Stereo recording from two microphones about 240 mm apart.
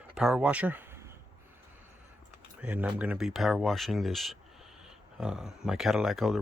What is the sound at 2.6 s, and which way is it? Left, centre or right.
Speech, centre.